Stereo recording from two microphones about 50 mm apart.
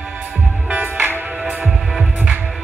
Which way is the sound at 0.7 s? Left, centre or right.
Right.